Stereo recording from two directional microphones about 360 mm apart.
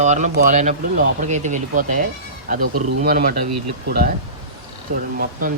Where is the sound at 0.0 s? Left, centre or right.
Centre.